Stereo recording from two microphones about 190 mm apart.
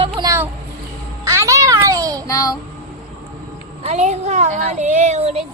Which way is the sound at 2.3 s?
15° left (ahead or behind).